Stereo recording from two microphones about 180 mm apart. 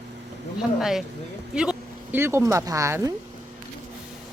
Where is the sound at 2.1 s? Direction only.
15° right (ahead or behind).